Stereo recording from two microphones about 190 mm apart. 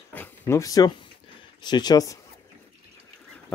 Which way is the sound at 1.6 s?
20° left (ahead or behind).